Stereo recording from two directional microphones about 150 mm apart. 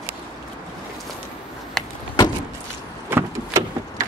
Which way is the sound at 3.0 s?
15° right (ahead or behind).